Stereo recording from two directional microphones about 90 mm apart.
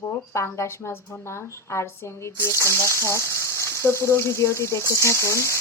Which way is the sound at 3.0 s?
30° left (ahead or behind).